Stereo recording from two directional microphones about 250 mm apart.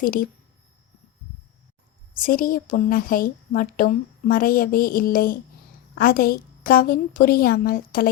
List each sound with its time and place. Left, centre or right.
0.0 s speech: left
2.1 s speech: left